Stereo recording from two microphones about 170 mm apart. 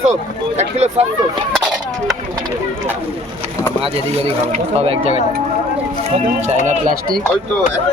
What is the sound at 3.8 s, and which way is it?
Speech, 35° right (ahead or behind).